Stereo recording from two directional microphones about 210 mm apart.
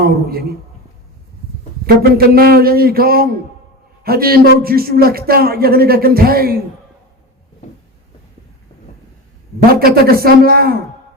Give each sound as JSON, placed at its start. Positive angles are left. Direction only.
{"t": 0.0, "sound": "a man's voice", "side_deg": -45}
{"t": 2.0, "sound": "a man's voice", "side_deg": -45}
{"t": 7.6, "sound": "a sound", "side_deg": 35}
{"t": 9.7, "sound": "a man's voice", "side_deg": -45}